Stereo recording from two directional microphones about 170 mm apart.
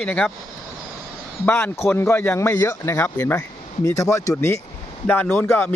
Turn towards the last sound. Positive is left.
turn(degrees=10)  # may be behind; listen again after turning